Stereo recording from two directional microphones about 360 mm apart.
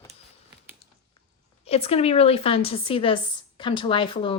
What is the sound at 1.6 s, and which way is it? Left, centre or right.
A woman's voice, centre.